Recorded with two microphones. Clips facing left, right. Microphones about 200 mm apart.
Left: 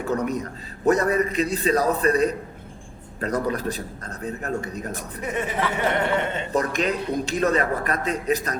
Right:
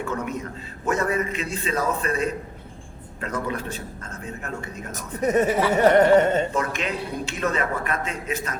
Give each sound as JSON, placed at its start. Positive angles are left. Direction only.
{"t": 0.0, "sound": "a man's voice", "side_deg": 35}
{"t": 4.9, "sound": "a sound", "side_deg": -40}
{"t": 6.5, "sound": "a man's voice", "side_deg": 35}